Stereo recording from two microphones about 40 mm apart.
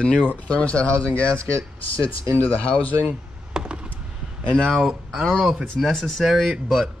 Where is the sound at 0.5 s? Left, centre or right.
Left.